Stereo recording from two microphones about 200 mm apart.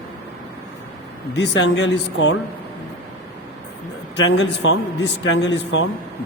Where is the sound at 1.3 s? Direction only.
60° left (ahead or behind).